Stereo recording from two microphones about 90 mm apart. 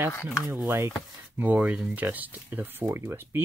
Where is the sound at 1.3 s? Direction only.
20° right (ahead or behind).